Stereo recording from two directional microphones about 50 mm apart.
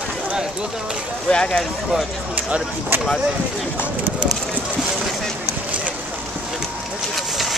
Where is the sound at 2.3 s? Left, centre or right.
Right.